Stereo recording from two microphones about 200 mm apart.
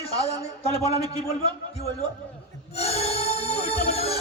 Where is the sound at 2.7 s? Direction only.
30° left (ahead or behind).